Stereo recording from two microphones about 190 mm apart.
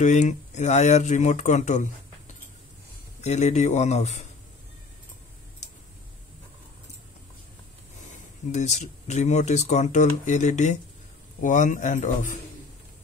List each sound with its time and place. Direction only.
0.0 s speech: 40° left (ahead or behind)
3.2 s speech: 35° left (ahead or behind)
8.5 s speech: 40° left (ahead or behind)